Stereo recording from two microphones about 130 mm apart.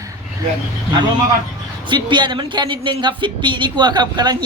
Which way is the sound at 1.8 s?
35° right (ahead or behind).